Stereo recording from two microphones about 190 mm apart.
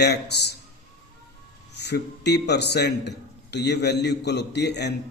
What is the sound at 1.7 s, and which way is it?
A man's voice, 60° left (ahead or behind).